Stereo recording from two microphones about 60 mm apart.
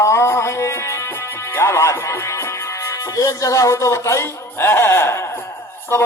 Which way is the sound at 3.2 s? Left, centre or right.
Left.